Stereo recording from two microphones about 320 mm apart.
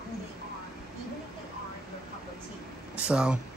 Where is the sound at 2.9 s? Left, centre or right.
Centre.